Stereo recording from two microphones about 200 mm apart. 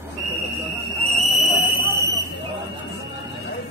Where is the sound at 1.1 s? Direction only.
Centre (ahead or behind).